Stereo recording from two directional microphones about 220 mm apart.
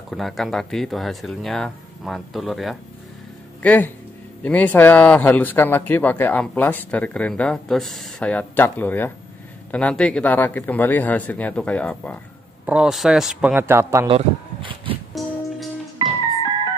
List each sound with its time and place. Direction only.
0.1 s speech: centre (ahead or behind)
14.0 s a sound: 25° right (ahead or behind)
15.2 s music: centre (ahead or behind)